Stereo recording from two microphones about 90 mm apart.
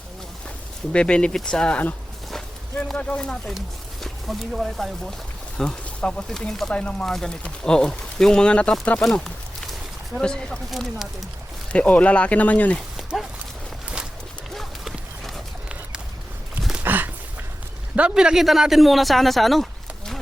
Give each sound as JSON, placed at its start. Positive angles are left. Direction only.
{"t": 0.9, "sound": "speech", "side_deg": 10}
{"t": 5.5, "sound": "speech", "side_deg": 10}
{"t": 11.7, "sound": "speech", "side_deg": 15}
{"t": 13.0, "sound": "horse", "side_deg": 0}
{"t": 14.5, "sound": "horse", "side_deg": 0}
{"t": 16.8, "sound": "a sound", "side_deg": -20}
{"t": 17.9, "sound": "speech", "side_deg": -10}